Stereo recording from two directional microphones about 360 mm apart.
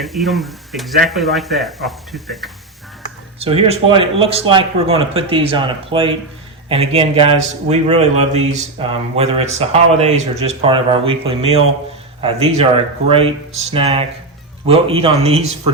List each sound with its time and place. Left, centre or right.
0.0 s speech: centre
3.4 s speech: centre